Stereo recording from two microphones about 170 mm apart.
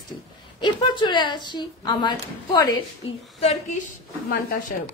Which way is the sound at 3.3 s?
35° left (ahead or behind).